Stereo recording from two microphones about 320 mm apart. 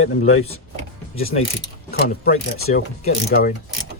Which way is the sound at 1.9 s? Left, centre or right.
Left.